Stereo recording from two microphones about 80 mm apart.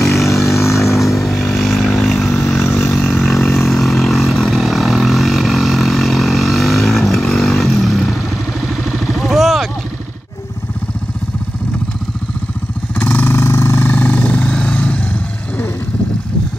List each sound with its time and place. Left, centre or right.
0.1 s vehicle: left
0.9 s vehicle: centre
13.0 s vehicle: left